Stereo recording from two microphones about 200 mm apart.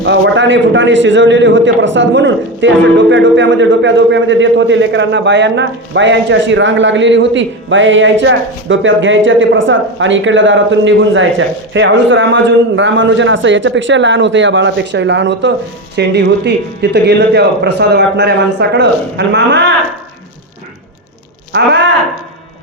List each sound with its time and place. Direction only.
0.0 s a man's voice: 65° right (ahead or behind)